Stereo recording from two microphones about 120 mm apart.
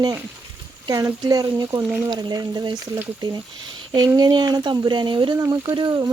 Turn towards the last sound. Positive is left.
turn(degrees=-35)  # may be behind; listen again after turning